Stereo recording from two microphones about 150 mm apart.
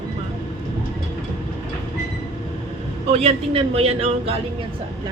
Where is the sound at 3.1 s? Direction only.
45° right (ahead or behind).